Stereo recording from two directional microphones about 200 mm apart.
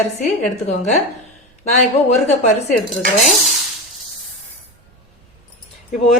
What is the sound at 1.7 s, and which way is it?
A woman's voice, 35° left (ahead or behind).